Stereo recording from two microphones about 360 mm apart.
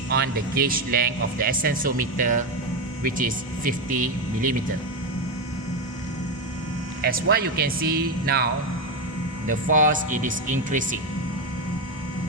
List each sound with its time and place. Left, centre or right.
0.1 s speech: right
7.0 s speech: right
9.5 s speech: right